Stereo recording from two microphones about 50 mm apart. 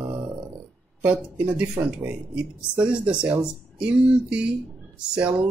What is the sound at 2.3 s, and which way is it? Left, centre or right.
Speech, right.